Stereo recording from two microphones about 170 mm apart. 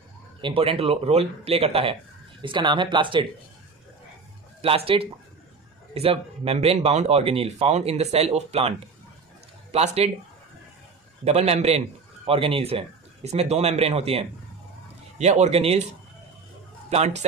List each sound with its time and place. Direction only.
0.4 s speech: 30° right (ahead or behind)
4.6 s speech: 35° right (ahead or behind)
11.2 s speech: 40° right (ahead or behind)